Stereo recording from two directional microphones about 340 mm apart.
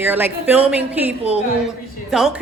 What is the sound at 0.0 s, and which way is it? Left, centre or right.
A woman's voice, centre.